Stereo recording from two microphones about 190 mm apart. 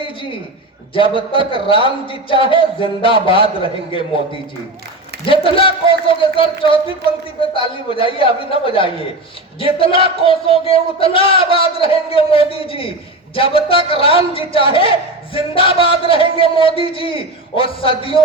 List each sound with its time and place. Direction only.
0.0 s a sound: 25° left (ahead or behind)
0.9 s speech: 25° left (ahead or behind)
5.2 s speech: 30° left (ahead or behind)